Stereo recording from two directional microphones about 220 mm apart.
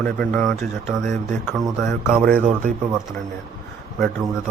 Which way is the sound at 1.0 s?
35° right (ahead or behind).